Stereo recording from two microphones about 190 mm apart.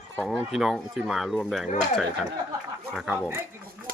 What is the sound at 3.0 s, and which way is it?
Speech, centre (ahead or behind).